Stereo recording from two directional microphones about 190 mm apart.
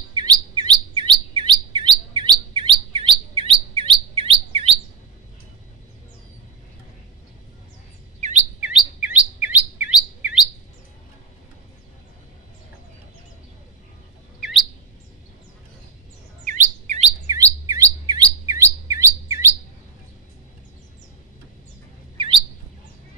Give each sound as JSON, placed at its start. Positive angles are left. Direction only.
{"t": 0.1, "sound": "chirp", "side_deg": -25}
{"t": 8.4, "sound": "chirp", "side_deg": -5}
{"t": 16.4, "sound": "chirp", "side_deg": -40}
{"t": 17.3, "sound": "chirp", "side_deg": -15}
{"t": 22.1, "sound": "chirp", "side_deg": -25}